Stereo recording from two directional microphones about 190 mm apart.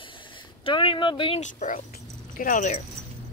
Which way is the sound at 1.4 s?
40° left (ahead or behind).